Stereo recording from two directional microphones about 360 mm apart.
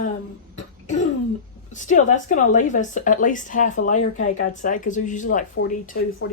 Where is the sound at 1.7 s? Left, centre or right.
Left.